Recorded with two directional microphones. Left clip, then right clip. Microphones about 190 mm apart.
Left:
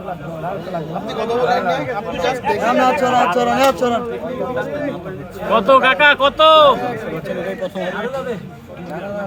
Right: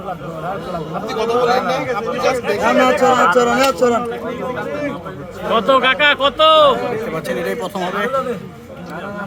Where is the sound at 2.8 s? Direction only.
35° right (ahead or behind).